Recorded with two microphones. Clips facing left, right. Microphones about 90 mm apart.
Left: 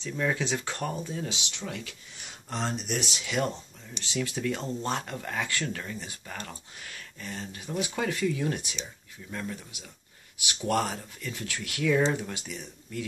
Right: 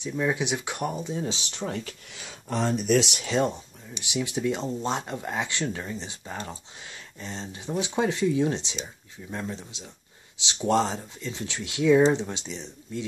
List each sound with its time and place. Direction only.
0.0 s speech: 15° right (ahead or behind); by 2.0 s 35° right (ahead or behind)
3.3 s speech: 30° right (ahead or behind)
3.5 s speech: 15° right (ahead or behind)